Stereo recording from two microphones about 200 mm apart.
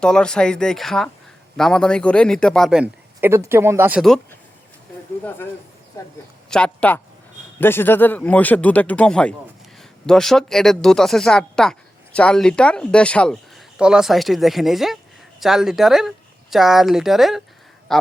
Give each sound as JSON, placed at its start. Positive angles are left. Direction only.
{"t": 0.0, "sound": "speech", "side_deg": 5}
{"t": 6.0, "sound": "speech", "side_deg": 20}
{"t": 6.5, "sound": "speech", "side_deg": 5}